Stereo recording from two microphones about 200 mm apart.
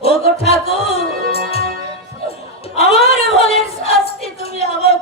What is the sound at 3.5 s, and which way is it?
A capella, 30° left (ahead or behind).